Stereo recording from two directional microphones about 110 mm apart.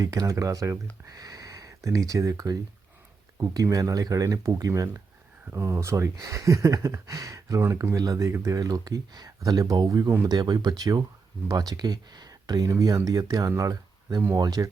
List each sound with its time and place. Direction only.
0.0 s speech: 35° right (ahead or behind)